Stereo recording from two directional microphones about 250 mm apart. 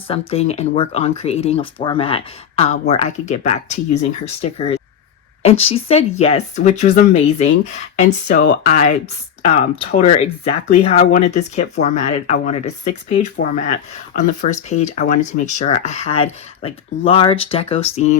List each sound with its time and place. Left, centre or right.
0.1 s speech: left
8.0 s speech: left